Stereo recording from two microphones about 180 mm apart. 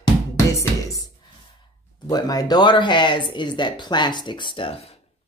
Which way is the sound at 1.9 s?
20° left (ahead or behind).